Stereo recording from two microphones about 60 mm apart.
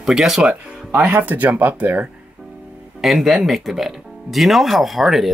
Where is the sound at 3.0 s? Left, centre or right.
Centre.